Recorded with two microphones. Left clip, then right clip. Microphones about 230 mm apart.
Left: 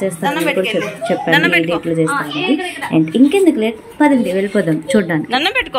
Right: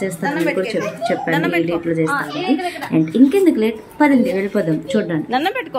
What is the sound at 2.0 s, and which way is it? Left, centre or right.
Speech, right.